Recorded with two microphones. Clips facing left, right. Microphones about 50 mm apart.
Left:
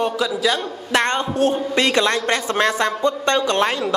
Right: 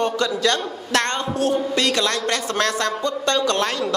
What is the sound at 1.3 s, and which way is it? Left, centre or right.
A woman's voice, left.